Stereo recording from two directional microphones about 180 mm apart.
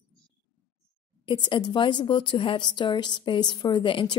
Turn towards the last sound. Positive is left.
turn(degrees=30)  # may be behind; listen again after turning